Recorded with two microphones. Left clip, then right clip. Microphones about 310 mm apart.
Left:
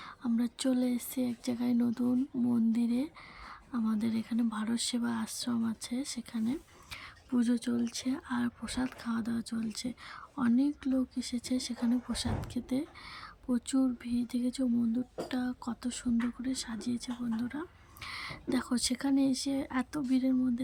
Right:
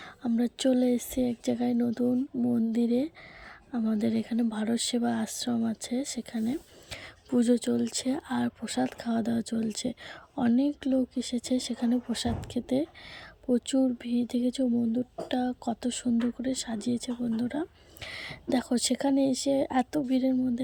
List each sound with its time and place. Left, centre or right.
0.0 s speech: centre
2.7 s speech: centre